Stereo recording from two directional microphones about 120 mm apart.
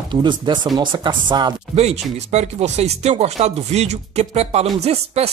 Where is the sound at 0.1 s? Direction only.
40° right (ahead or behind).